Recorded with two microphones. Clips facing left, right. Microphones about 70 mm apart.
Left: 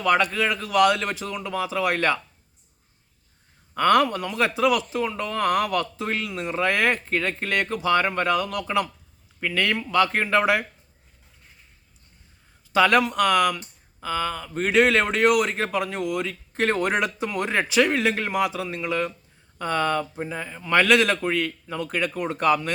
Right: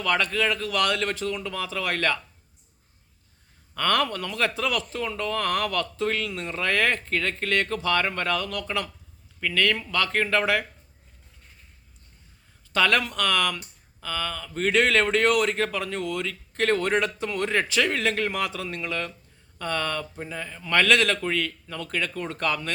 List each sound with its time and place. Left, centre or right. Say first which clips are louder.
0.0 s speech: left 3 dB; centre
3.8 s speech: left 5 dB; centre
12.7 s speech: left 4 dB; centre